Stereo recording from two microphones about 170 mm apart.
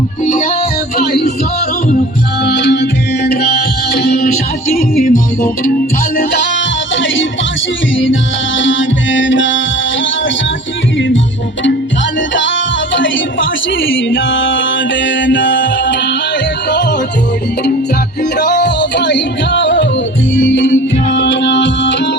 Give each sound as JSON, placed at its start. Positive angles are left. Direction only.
{"t": 0.3, "sound": "music", "side_deg": 50}
{"t": 0.9, "sound": "music", "side_deg": 70}
{"t": 2.4, "sound": "music", "side_deg": 85}
{"t": 4.8, "sound": "music", "side_deg": 55}
{"t": 6.1, "sound": "music", "side_deg": 90}
{"t": 12.3, "sound": "music", "side_deg": 90}
{"t": 13.7, "sound": "mantra", "side_deg": 90}
{"t": 18.2, "sound": "music", "side_deg": 85}